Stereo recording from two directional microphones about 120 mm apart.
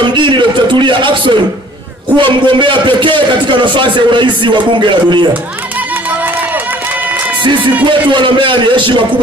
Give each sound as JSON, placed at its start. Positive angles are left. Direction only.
{"t": 0.1, "sound": "a sound", "side_deg": -45}
{"t": 2.1, "sound": "a man's voice", "side_deg": -40}
{"t": 7.4, "sound": "a man's voice", "side_deg": -40}